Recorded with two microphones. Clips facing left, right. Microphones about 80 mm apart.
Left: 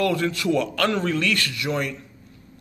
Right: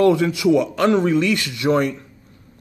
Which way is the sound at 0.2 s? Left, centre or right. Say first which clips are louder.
Right 6 dB; centre.